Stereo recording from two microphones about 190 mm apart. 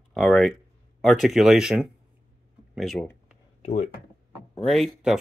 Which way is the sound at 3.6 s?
40° left (ahead or behind).